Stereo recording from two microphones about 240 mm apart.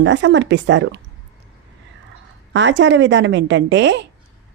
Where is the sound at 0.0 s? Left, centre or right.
Right.